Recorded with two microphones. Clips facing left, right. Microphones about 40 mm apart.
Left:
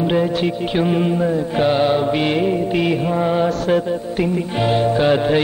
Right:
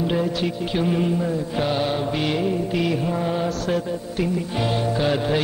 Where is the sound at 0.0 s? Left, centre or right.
Left.